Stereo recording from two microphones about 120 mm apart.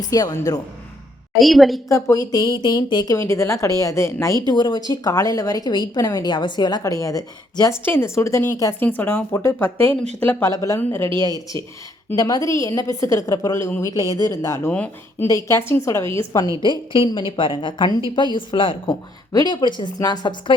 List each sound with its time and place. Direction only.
0.0 s a woman's voice: 30° left (ahead or behind)
1.4 s a woman's voice: centre (ahead or behind)
1.9 s a woman's voice: 25° left (ahead or behind)
3.2 s a woman's voice: 25° left (ahead or behind)
4.4 s a woman's voice: 40° left (ahead or behind)
7.9 s a woman's voice: 20° left (ahead or behind)
10.5 s a woman's voice: 25° left (ahead or behind)
11.3 s speech: 30° right (ahead or behind)
12.1 s a woman's voice: 30° left (ahead or behind)
14.7 s speech: 10° left (ahead or behind)
15.3 s a woman's voice: 25° left (ahead or behind)
16.6 s a woman's voice: 45° left (ahead or behind)
19.3 s a woman's voice: 35° left (ahead or behind)